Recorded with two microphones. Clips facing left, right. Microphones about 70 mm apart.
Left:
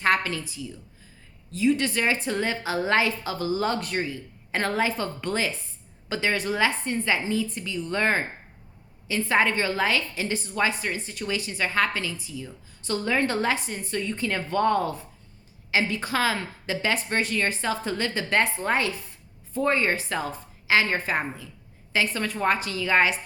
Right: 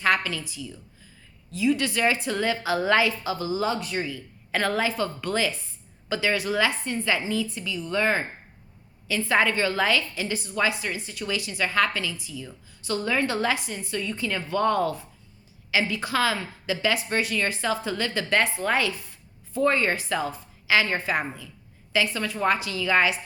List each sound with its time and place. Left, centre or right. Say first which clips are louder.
0.0 s a woman's voice: even; left
4.0 s a woman's voice: left 1 dB; left
9.0 s a woman's voice: even; left